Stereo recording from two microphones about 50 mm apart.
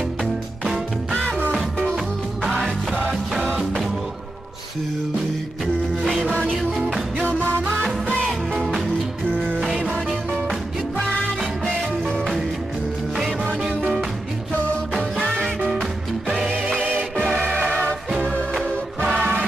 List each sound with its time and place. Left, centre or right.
1.9 s music: centre
6.0 s music: centre
6.3 s music: centre
9.4 s music: centre
13.1 s music: centre
15.0 s music: centre
15.8 s music: centre
19.0 s music: centre